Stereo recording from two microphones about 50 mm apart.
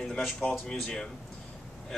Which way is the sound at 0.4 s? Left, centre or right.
Centre.